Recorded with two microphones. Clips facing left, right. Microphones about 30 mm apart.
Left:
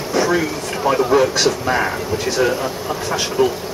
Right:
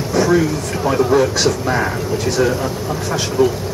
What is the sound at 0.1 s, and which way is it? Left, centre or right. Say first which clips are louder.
Speech: right 3 dB; centre.